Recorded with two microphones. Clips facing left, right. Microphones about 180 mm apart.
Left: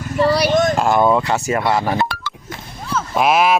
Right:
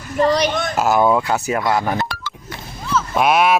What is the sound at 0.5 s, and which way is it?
Speech, 45° left (ahead or behind).